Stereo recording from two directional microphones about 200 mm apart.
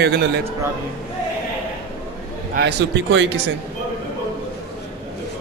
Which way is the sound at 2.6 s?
65° right (ahead or behind).